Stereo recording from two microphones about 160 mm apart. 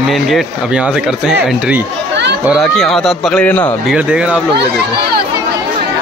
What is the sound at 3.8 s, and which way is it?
Speech, 5° right (ahead or behind).